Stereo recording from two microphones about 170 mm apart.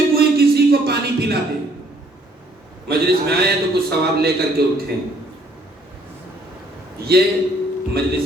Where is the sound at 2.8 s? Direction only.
65° right (ahead or behind).